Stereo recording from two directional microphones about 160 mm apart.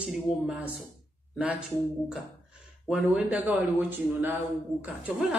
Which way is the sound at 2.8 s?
10° right (ahead or behind).